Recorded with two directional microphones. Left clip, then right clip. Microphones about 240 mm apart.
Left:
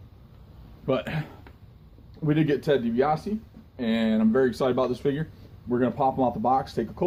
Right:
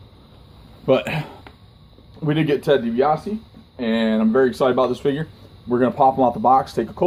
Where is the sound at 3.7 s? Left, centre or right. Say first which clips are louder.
Right 6 dB; centre.